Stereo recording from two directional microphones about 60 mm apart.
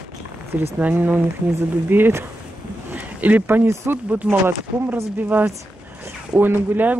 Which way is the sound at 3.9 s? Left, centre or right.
Right.